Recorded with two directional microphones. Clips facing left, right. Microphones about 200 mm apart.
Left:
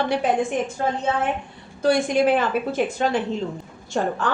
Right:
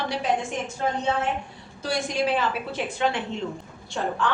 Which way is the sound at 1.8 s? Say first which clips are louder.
Left 7 dB; 55° left (ahead or behind).